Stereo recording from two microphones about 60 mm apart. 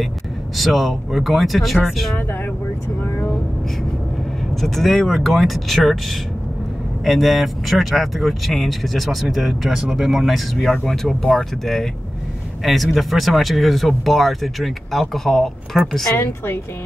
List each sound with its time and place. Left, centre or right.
0.6 s speech: centre
3.0 s vehicle: left
4.6 s speech: centre
16.2 s a woman's voice: left